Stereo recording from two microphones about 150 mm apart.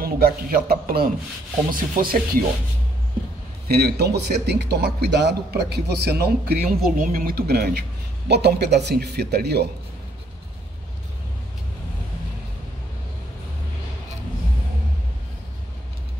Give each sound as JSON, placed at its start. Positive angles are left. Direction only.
{"t": 0.0, "sound": "a man's voice", "side_deg": -85}
{"t": 3.6, "sound": "speech", "side_deg": -90}